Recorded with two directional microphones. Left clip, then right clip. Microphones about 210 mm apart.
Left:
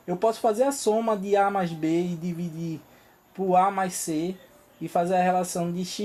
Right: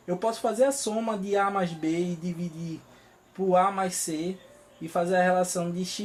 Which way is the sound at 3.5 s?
40° left (ahead or behind).